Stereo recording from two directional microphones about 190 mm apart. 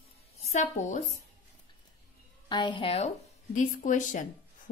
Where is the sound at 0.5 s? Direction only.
40° left (ahead or behind).